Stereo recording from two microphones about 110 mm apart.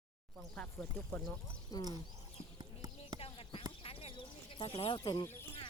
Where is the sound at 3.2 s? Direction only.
55° left (ahead or behind).